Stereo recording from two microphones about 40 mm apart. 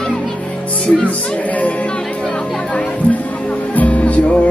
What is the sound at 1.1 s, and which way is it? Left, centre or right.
Music, left.